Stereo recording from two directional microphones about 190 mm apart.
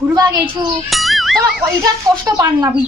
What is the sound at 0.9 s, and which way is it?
Speech, centre (ahead or behind).